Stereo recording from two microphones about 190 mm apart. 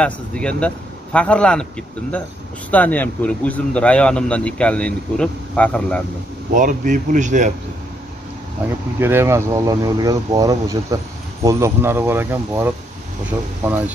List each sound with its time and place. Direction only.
0.0 s a man's voice: 5° left (ahead or behind)
6.5 s speech: 45° right (ahead or behind)
9.0 s speech: 15° right (ahead or behind)